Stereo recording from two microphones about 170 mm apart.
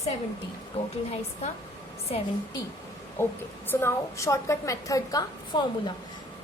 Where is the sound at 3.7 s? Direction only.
15° left (ahead or behind).